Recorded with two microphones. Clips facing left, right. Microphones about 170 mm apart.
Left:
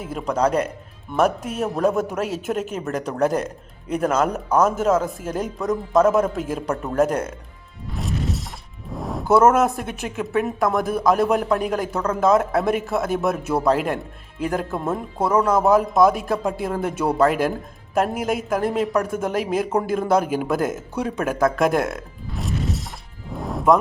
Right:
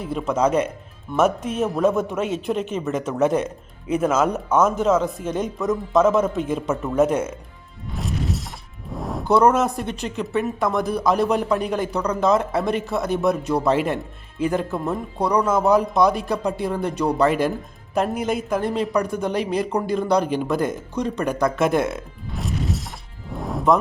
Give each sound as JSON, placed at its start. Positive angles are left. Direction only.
{"t": 0.0, "sound": "speech", "side_deg": 0}
{"t": 7.9, "sound": "music", "side_deg": 0}
{"t": 8.9, "sound": "speech", "side_deg": 0}
{"t": 23.3, "sound": "music", "side_deg": 0}